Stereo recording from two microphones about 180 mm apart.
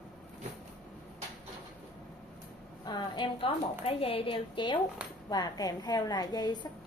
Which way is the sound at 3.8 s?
30° left (ahead or behind).